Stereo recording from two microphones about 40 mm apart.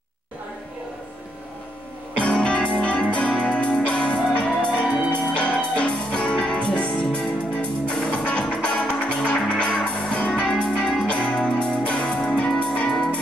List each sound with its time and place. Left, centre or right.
2.2 s music: left
11.1 s music: left